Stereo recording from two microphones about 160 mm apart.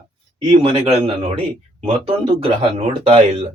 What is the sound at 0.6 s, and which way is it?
Speech, 35° right (ahead or behind).